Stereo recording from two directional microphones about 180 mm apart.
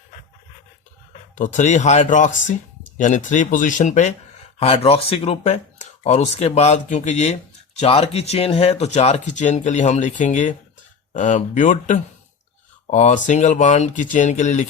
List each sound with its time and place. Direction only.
1.4 s speech: 45° left (ahead or behind)
4.6 s speech: 30° left (ahead or behind)